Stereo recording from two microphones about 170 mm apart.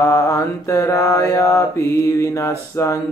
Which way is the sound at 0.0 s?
15° left (ahead or behind).